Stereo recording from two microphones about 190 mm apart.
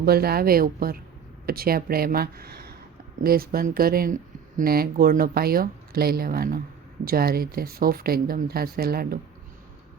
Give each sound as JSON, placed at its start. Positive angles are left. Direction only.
{"t": 0.0, "sound": "speech", "side_deg": -55}